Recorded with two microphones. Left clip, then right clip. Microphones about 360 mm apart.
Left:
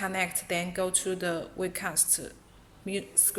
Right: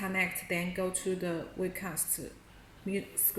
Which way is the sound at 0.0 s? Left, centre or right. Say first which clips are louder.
Left 2 dB; left.